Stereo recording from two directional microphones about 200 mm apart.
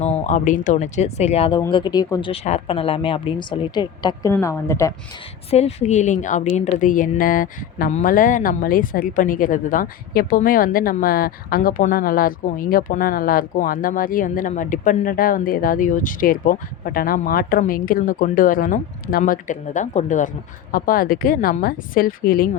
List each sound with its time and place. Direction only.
0.0 s speech: 35° left (ahead or behind); by 4.9 s 15° left (ahead or behind)
5.5 s a woman's voice: 30° left (ahead or behind); by 22.4 s 45° left (ahead or behind)